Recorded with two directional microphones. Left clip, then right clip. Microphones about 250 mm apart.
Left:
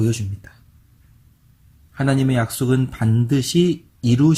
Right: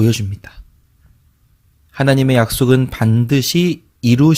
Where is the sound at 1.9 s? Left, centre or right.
Right.